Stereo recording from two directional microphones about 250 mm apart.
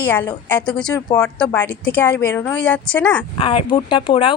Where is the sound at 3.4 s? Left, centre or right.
Left.